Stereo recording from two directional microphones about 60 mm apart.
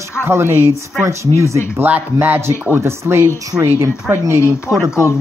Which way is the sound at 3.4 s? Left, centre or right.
Right.